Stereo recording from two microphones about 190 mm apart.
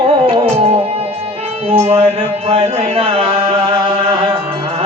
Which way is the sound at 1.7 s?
30° right (ahead or behind).